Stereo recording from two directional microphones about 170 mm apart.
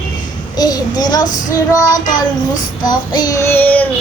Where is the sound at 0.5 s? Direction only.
25° left (ahead or behind).